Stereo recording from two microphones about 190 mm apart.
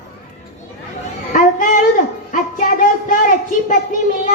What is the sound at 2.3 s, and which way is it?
Music, 45° left (ahead or behind).